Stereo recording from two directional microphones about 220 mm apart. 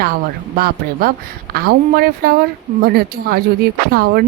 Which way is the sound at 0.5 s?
45° right (ahead or behind).